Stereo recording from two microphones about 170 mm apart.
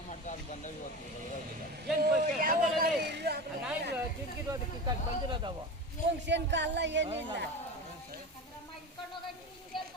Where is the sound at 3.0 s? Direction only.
80° right.